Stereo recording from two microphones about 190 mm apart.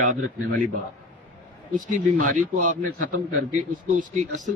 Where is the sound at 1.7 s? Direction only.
45° right (ahead or behind).